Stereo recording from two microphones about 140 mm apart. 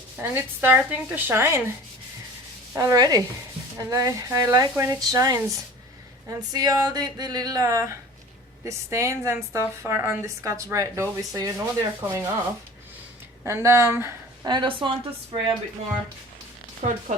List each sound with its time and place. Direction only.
0.2 s speech: 15° right (ahead or behind)
2.7 s a woman's voice: 25° right (ahead or behind)
13.4 s a woman's voice: 20° right (ahead or behind)
14.4 s a woman's voice: 30° right (ahead or behind)
16.8 s speech: 60° right (ahead or behind)